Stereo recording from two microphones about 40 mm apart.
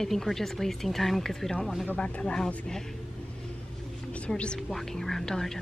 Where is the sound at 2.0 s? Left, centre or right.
Left.